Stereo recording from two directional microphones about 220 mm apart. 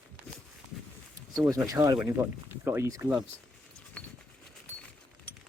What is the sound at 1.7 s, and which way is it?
Speech, 15° right (ahead or behind).